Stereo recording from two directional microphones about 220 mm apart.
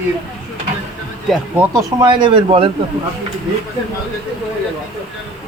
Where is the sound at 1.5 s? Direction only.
15° right (ahead or behind).